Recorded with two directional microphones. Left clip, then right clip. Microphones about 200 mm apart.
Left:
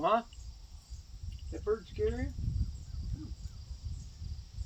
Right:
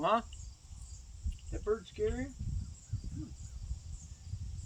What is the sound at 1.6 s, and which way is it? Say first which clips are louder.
Speech: left 1 dB; 15° right (ahead or behind).